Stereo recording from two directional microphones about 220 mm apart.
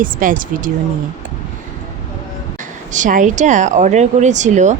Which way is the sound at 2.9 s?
35° right (ahead or behind).